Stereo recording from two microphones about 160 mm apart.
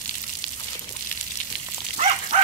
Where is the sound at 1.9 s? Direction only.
40° right (ahead or behind).